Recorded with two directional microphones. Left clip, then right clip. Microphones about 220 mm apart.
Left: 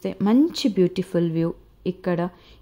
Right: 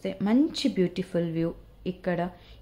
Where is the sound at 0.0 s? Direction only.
40° left (ahead or behind).